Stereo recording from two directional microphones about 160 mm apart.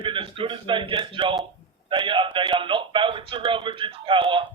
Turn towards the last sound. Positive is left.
turn(degrees=-30)  # may be behind; listen again after turning